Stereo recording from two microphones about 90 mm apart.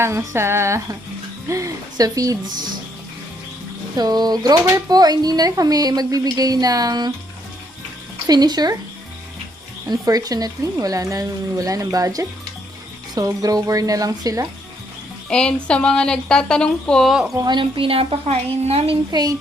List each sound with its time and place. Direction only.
0.0 s speech: 30° right (ahead or behind)
3.9 s speech: 50° right (ahead or behind)
8.3 s speech: 50° right (ahead or behind)
9.9 s speech: 45° right (ahead or behind)
15.3 s speech: 10° left (ahead or behind)
17.1 s speech: 5° right (ahead or behind)
17.3 s a woman's voice: 55° right (ahead or behind); by 18.2 s 90° right
19.1 s speech: 55° right (ahead or behind)